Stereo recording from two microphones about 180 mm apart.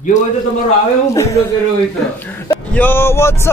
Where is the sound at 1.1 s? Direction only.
15° left (ahead or behind).